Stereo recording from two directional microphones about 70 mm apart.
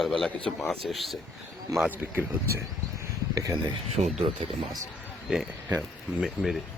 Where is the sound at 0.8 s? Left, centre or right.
Centre.